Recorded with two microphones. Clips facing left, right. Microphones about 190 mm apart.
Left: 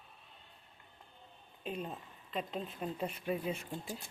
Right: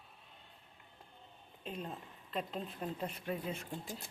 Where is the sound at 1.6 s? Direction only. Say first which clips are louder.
Left 3 dB; 5° left (ahead or behind).